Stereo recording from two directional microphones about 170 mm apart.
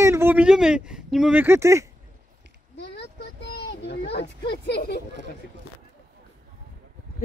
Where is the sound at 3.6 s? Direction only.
75° left (ahead or behind).